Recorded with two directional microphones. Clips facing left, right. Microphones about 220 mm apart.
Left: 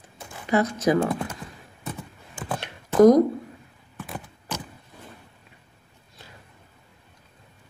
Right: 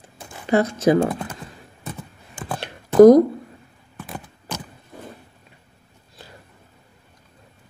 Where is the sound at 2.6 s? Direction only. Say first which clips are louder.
Right 6 dB; 35° right (ahead or behind).